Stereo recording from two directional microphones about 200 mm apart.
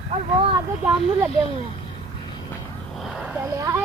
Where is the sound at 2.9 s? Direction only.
Centre (ahead or behind).